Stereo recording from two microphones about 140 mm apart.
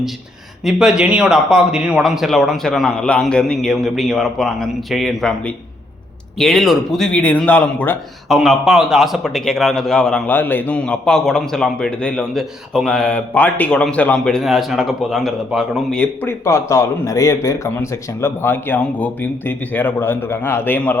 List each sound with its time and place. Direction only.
0.6 s a man's voice: 5° right (ahead or behind)
8.3 s a man's voice: centre (ahead or behind)
16.2 s a man's voice: 20° left (ahead or behind)